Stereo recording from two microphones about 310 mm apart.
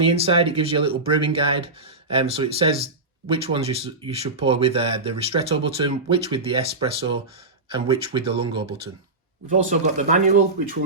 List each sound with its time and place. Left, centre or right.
0.0 s speech: centre